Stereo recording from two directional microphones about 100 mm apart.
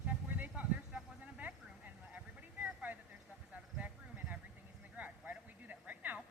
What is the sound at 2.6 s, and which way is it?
Vehicle, 15° right (ahead or behind).